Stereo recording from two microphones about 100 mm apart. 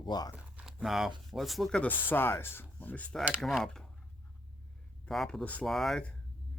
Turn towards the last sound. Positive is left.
turn(degrees=5)  # may be behind; listen again after turning